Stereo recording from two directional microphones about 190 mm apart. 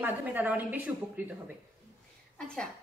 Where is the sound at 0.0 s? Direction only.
10° right (ahead or behind).